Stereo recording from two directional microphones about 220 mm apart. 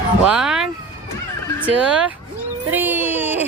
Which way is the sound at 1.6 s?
5° right (ahead or behind).